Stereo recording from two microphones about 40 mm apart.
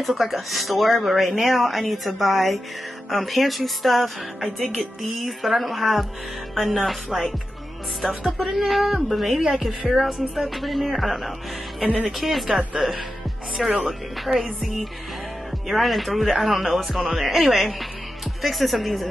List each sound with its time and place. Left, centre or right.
0.0 s speech: centre
11.8 s speech: right
12.2 s speech: centre